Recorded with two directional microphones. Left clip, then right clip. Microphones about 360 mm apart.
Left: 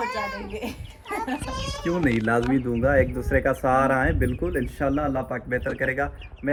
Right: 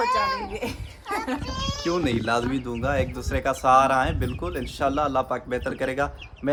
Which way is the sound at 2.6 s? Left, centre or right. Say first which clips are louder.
Left 5 dB; left.